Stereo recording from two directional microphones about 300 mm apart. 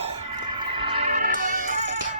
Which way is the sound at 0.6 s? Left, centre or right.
Centre.